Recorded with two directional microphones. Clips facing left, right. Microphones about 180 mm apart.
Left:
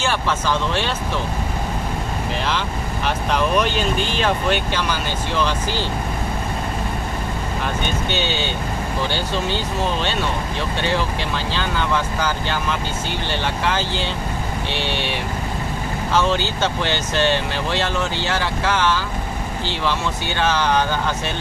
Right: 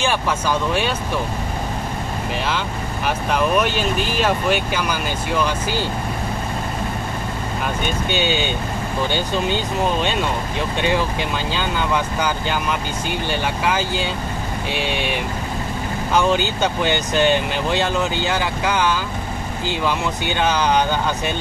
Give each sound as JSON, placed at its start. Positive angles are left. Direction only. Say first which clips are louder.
{"t": 0.0, "sound": "speech", "louder": "right 1 dB", "side_deg": -15}
{"t": 3.3, "sound": "speech", "louder": "right 1 dB", "side_deg": -5}
{"t": 8.1, "sound": "speech", "louder": "right 5 dB", "side_deg": -15}
{"t": 11.5, "sound": "speech", "louder": "even", "side_deg": -15}